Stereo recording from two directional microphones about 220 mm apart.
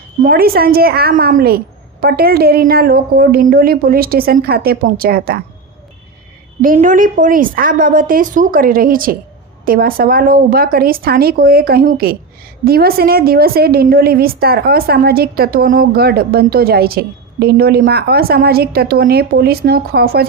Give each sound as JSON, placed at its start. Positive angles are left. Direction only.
{"t": 0.2, "sound": "a woman's voice", "side_deg": -40}
{"t": 6.6, "sound": "a woman's voice", "side_deg": -35}